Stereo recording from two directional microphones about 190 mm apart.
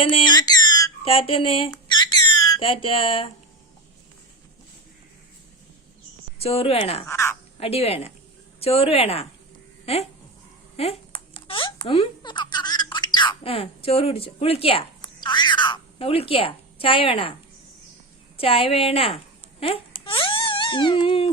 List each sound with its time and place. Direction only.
0.0 s a sound: 25° left (ahead or behind)
6.4 s speech: 30° left (ahead or behind)
7.0 s speech: 15° left (ahead or behind)
7.6 s a child's voice: 30° left (ahead or behind)
18.3 s speech: 30° left (ahead or behind)